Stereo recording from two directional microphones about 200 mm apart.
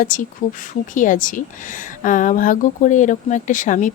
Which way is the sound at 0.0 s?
40° left (ahead or behind).